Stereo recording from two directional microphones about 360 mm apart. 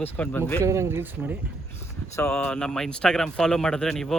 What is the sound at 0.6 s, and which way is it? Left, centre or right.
Speech, centre.